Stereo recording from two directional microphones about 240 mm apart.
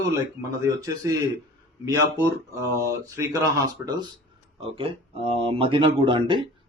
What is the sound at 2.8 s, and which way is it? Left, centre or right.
Speech, centre.